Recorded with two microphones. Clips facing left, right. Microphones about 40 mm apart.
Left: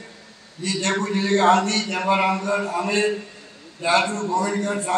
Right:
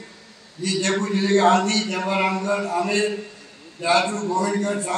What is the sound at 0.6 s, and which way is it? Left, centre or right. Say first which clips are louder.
A man's voice: right 1 dB; left.